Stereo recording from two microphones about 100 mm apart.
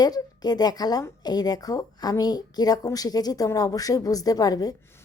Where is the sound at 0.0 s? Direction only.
40° left (ahead or behind).